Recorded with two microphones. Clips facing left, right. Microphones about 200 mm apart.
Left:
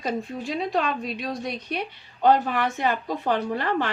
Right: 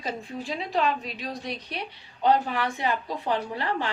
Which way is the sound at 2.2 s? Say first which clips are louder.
Left 3 dB; 50° left (ahead or behind).